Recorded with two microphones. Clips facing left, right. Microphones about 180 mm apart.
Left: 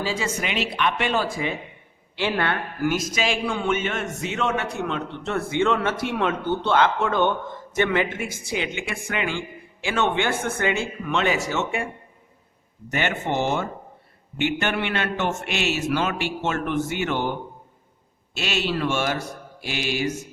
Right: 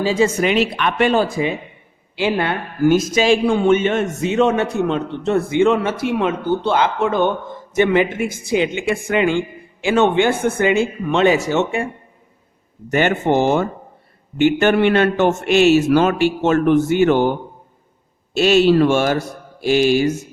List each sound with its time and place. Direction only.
0.0 s a woman's voice: 20° right (ahead or behind)
0.4 s speech: 45° right (ahead or behind)
1.2 s a man's voice: 20° right (ahead or behind)
2.8 s a man's voice: 30° right (ahead or behind)
11.0 s a man's voice: 25° right (ahead or behind)
12.9 s a man's voice: 45° right (ahead or behind)
18.3 s a man's voice: 40° right (ahead or behind)